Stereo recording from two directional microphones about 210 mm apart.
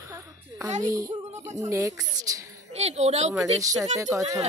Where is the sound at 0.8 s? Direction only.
15° right (ahead or behind).